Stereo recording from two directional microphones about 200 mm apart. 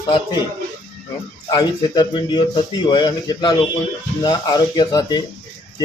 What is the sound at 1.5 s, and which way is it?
Speech, 20° left (ahead or behind).